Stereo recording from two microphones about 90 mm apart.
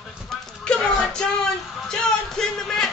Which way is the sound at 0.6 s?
10° left (ahead or behind).